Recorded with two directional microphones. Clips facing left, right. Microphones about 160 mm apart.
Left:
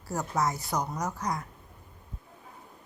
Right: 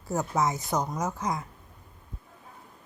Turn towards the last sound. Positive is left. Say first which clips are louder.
# right 2 dB
turn(degrees=-25)  # may be behind; listen again after turning